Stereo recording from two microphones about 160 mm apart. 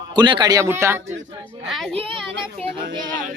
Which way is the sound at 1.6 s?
Centre (ahead or behind).